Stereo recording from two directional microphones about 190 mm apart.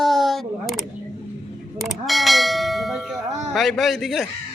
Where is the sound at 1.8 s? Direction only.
Centre (ahead or behind).